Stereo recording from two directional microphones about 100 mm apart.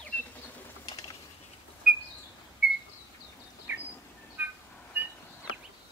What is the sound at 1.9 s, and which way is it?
Bird, 5° right (ahead or behind).